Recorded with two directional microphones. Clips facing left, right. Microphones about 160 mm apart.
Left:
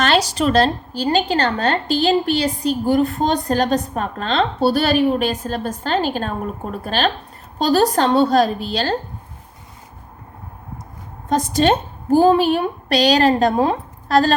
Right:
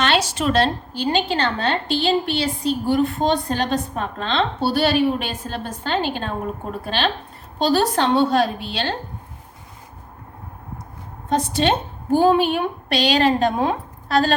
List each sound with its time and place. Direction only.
0.0 s a woman's voice: 40° left (ahead or behind)
11.3 s a woman's voice: 40° left (ahead or behind)